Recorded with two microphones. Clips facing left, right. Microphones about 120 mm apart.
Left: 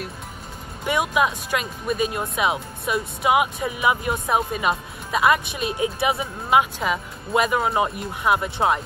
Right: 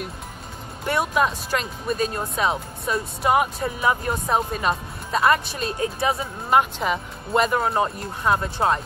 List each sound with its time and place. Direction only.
0.8 s speech: 10° left (ahead or behind)
5.7 s speech: 15° left (ahead or behind)
6.5 s speech: centre (ahead or behind)